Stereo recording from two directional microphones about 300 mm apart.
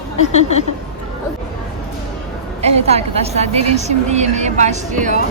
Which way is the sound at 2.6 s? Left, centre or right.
Right.